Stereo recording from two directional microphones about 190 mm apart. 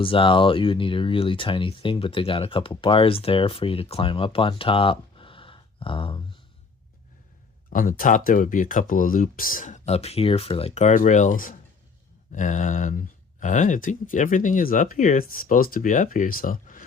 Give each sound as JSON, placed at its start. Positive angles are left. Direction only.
{"t": 0.0, "sound": "speech", "side_deg": 30}
{"t": 7.7, "sound": "speech", "side_deg": 45}